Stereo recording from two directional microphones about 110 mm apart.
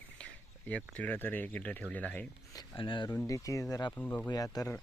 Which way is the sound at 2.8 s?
50° left (ahead or behind).